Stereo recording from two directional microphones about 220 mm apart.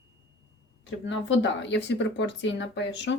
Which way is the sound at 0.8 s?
55° left (ahead or behind).